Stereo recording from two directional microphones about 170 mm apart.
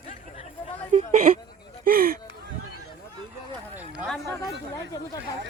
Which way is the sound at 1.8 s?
60° right (ahead or behind).